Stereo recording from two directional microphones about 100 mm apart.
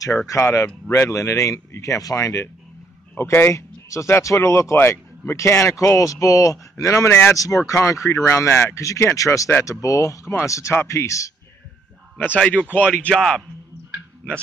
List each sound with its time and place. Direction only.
0.4 s speech: 25° left (ahead or behind)
3.2 s speech: 25° left (ahead or behind)
12.4 s speech: 10° left (ahead or behind)